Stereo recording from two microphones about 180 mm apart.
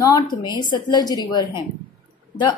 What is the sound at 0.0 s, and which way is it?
A woman's voice, 20° left (ahead or behind).